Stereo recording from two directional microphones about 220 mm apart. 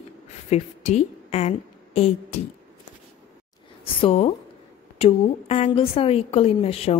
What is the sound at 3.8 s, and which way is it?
A woman's voice, 25° left (ahead or behind).